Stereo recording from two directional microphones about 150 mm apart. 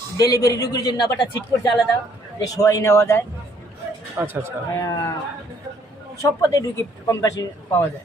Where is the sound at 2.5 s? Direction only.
20° left (ahead or behind).